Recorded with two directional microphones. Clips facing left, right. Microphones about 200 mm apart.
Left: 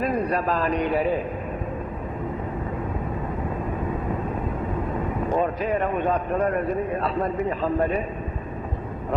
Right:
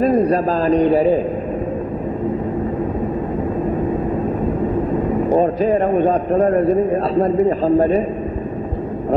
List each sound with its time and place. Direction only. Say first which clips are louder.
0.0 s a man's voice: right 9 dB; 35° right (ahead or behind)
5.3 s a man's voice: right 8 dB; 35° right (ahead or behind)